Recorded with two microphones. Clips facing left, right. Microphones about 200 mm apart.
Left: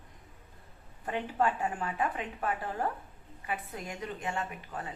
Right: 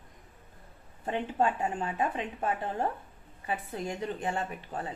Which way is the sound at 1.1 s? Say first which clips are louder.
Right 2 dB; 25° right (ahead or behind).